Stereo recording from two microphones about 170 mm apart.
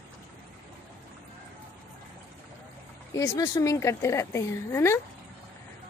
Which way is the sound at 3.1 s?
20° left (ahead or behind).